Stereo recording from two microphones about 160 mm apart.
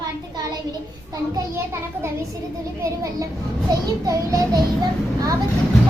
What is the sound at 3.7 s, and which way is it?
Child singing, 25° right (ahead or behind).